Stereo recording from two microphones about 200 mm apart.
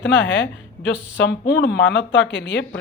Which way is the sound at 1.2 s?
60° left (ahead or behind).